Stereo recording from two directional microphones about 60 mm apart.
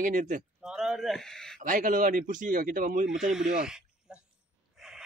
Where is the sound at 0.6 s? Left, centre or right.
Centre.